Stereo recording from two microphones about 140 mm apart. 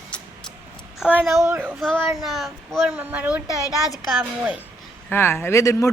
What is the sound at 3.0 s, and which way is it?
A woman's voice, 10° right (ahead or behind).